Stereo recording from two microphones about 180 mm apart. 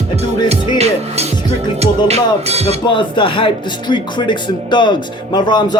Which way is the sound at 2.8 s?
30° left (ahead or behind).